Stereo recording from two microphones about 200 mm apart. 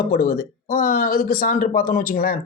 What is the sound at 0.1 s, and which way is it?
Speech, 45° left (ahead or behind).